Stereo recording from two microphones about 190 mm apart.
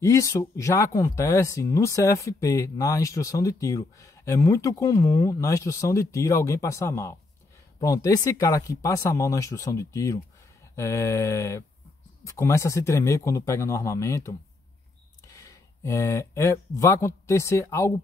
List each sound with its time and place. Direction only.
0.0 s speech: 15° left (ahead or behind)